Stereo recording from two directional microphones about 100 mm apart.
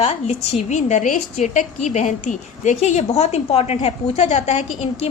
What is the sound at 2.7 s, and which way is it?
A woman's voice, 90° left.